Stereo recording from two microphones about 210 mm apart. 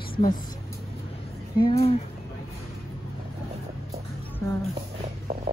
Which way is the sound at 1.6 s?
30° left (ahead or behind).